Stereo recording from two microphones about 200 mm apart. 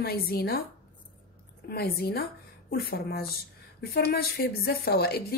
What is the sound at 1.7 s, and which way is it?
A woman's voice, 50° left (ahead or behind).